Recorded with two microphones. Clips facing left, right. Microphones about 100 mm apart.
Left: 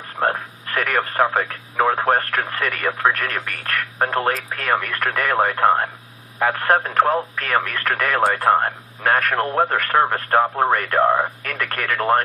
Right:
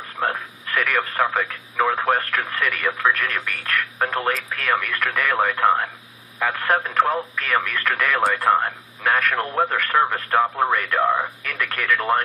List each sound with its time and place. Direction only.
0.2 s radio: 35° left (ahead or behind)
1.8 s speech: 35° left (ahead or behind)